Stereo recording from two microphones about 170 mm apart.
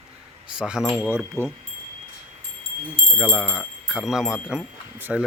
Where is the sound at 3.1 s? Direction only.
5° right (ahead or behind).